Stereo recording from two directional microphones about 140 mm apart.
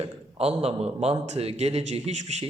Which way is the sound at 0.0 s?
45° right (ahead or behind).